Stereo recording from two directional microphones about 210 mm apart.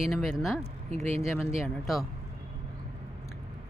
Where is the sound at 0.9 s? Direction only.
30° right (ahead or behind).